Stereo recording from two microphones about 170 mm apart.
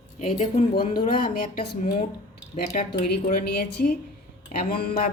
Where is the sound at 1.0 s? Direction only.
50° left (ahead or behind).